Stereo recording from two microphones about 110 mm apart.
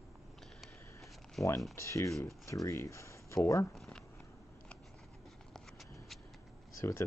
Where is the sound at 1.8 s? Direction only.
25° left (ahead or behind).